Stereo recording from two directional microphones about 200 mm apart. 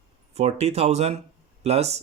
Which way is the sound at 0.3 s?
35° right (ahead or behind).